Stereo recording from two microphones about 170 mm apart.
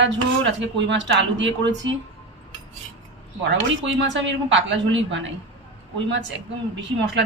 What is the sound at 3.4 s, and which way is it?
Speech, 90° right.